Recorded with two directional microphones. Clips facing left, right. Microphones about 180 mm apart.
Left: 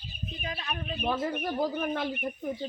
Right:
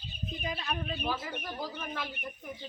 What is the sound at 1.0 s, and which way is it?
Speech, 50° left (ahead or behind).